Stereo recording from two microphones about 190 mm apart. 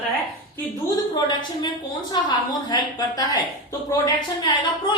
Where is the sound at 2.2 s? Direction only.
20° left (ahead or behind).